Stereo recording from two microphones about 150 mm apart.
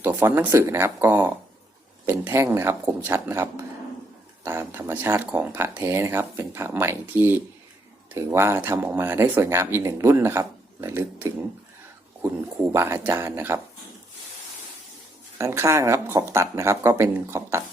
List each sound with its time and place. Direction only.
0.0 s speech: 15° right (ahead or behind)
15.4 s speech: 20° right (ahead or behind)